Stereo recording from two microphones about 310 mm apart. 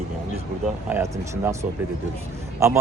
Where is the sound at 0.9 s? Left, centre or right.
Centre.